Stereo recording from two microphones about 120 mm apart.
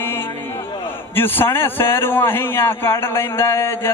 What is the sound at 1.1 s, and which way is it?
A man's voice, 15° left (ahead or behind).